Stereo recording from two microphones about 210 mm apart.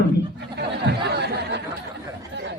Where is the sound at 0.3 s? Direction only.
50° right (ahead or behind).